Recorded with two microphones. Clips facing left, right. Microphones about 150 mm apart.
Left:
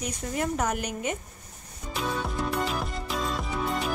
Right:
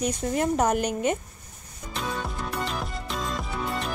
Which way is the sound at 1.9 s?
Centre (ahead or behind).